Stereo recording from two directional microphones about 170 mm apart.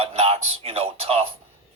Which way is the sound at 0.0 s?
35° right (ahead or behind).